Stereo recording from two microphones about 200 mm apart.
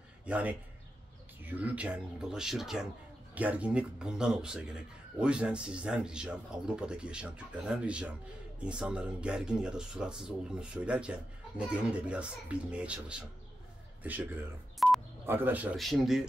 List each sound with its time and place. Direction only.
0.2 s a man's voice: 5° right (ahead or behind)
14.8 s telephone dialing: centre (ahead or behind)
15.2 s a man's voice: 10° right (ahead or behind)